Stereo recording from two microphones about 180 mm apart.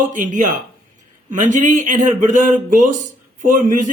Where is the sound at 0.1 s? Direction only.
45° right (ahead or behind).